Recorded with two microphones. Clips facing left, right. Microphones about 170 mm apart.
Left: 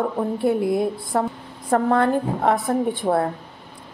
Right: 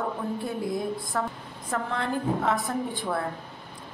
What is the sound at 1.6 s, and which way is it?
A woman's voice, 50° left (ahead or behind).